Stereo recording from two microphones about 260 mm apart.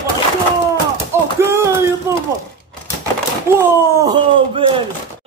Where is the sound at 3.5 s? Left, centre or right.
Centre.